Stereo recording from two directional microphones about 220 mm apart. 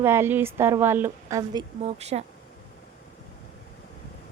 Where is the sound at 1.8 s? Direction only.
30° right (ahead or behind).